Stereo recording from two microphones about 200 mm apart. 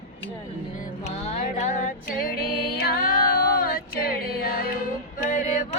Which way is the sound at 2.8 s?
50° left (ahead or behind).